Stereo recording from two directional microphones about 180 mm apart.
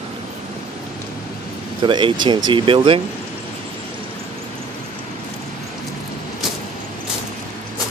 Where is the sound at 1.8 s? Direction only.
25° right (ahead or behind).